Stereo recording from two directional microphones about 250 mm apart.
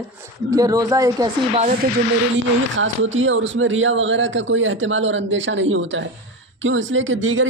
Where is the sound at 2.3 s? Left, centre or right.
Right.